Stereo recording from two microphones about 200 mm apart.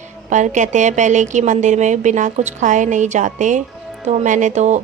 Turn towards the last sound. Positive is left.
turn(degrees=-35)  # may be behind; listen again after turning